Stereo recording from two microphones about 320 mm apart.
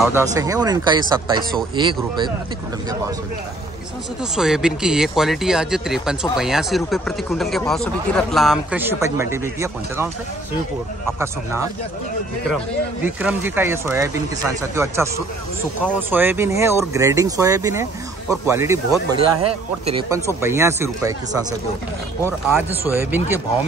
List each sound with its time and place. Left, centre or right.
0.0 s speech: centre
4.2 s speech: centre
11.1 s speech: centre
19.1 s speech: right
20.0 s speech: centre